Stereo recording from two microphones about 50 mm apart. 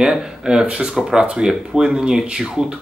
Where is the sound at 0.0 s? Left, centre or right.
Centre.